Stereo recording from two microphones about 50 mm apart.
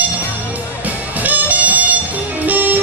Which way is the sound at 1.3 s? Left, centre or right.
Right.